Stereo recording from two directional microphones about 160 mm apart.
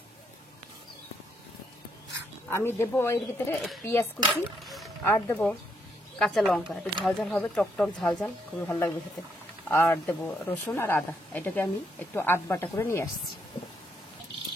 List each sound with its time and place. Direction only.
2.5 s speech: 15° left (ahead or behind)
4.3 s speech: centre (ahead or behind)
5.0 s speech: 15° left (ahead or behind)
6.1 s speech: 5° left (ahead or behind)
9.7 s speech: 15° left (ahead or behind)